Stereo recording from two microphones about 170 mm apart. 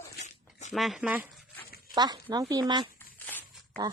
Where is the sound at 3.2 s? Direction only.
10° left (ahead or behind).